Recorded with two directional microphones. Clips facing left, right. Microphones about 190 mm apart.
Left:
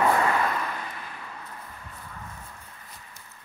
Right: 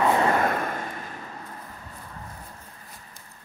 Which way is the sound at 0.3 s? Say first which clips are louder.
Right 3 dB; 50° right (ahead or behind).